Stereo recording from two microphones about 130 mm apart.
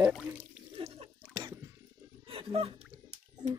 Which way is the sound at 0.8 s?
45° right (ahead or behind).